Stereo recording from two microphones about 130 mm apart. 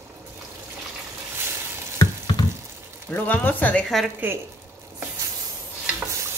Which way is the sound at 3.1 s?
10° left (ahead or behind).